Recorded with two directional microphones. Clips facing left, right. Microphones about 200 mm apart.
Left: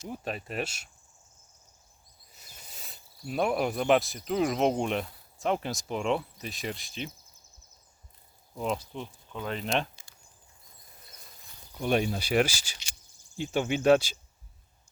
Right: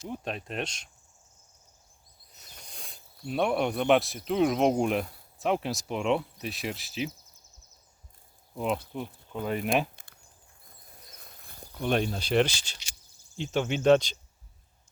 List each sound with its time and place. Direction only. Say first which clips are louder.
0.1 s speech: even; 5° left (ahead or behind)
2.3 s speech: right 2 dB; 5° left (ahead or behind)
8.5 s speech: right 2 dB; 5° right (ahead or behind)
9.9 s a sound: right 2 dB; 55° right (ahead or behind)
11.2 s a sound: right 5 dB; 55° right (ahead or behind)
11.7 s speech: left 1 dB; 5° left (ahead or behind)